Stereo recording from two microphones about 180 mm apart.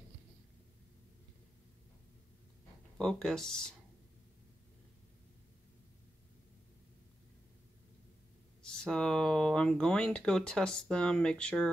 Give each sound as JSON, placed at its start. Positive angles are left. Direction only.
{"t": 3.0, "sound": "speech", "side_deg": 5}
{"t": 8.6, "sound": "speech", "side_deg": 5}